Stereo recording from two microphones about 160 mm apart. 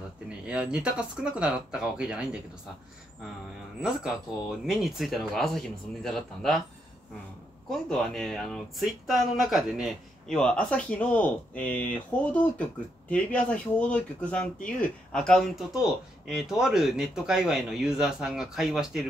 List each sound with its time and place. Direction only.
0.5 s speech: 5° right (ahead or behind)
3.8 s speech: 5° right (ahead or behind)
7.7 s speech: 5° left (ahead or behind)